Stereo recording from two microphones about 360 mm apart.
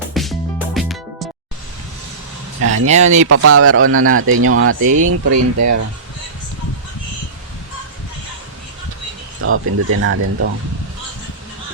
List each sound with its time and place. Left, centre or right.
0.1 s music: centre
2.6 s a sound: right
2.8 s speech: centre
3.2 s speech: right
4.9 s speech: right
9.4 s speech: right